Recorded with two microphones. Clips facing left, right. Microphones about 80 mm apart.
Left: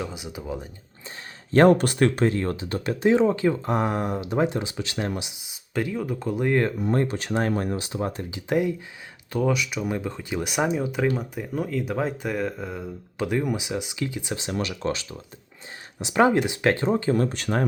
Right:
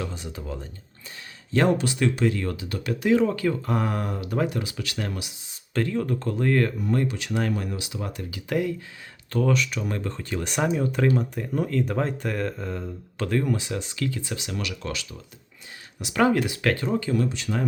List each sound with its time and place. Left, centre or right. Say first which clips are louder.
0.0 s speech: left 1 dB; centre
1.5 s speech: left 5 dB; left; by 14.3 s centre
14.3 s speech: left 3 dB; left